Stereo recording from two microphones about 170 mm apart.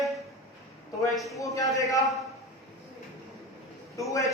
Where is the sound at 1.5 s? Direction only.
20° left (ahead or behind).